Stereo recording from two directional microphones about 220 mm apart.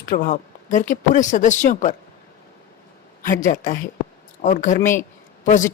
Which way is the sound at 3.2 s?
35° left (ahead or behind).